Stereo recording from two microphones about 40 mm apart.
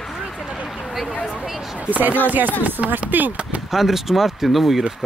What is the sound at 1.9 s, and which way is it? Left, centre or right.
Speech, right.